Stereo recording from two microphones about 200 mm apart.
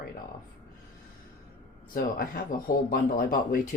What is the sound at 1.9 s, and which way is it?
Speech, 45° left (ahead or behind).